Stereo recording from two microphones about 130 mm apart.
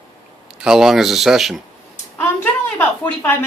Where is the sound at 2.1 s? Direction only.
15° left (ahead or behind).